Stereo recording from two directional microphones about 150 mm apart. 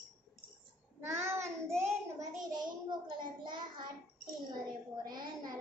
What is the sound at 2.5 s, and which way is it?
A child's voice, 30° right (ahead or behind).